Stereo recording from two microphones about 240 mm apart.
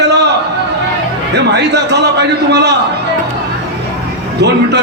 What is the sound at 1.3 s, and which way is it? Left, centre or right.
A man's voice, right.